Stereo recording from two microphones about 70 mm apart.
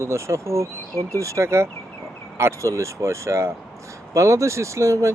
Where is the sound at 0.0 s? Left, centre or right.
Right.